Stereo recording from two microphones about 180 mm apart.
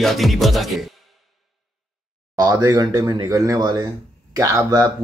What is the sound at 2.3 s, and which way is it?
Speech, 20° right (ahead or behind).